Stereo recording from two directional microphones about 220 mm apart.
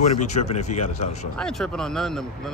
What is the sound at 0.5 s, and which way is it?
Speech, 30° left (ahead or behind).